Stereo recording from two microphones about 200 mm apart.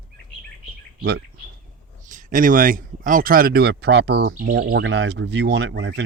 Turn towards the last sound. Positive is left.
turn(degrees=-65)  # may be behind; listen again after turning